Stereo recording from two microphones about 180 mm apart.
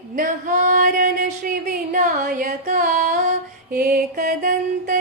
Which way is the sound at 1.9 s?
45° right (ahead or behind).